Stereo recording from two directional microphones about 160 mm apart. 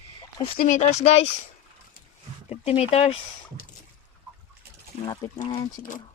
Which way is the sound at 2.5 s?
40° left (ahead or behind).